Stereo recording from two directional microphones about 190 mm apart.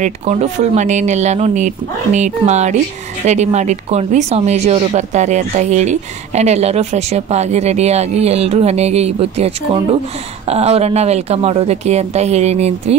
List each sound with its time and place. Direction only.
0.0 s speech: 35° right (ahead or behind)
10.5 s speech: 35° right (ahead or behind)